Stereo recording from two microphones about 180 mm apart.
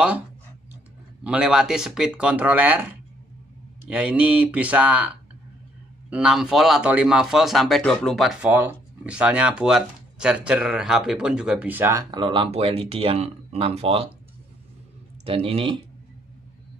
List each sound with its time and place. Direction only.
1.2 s speech: 5° right (ahead or behind); by 14.1 s 35° right (ahead or behind)
15.2 s speech: 30° right (ahead or behind)